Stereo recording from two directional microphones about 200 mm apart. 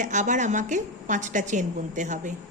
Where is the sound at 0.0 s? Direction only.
40° right (ahead or behind).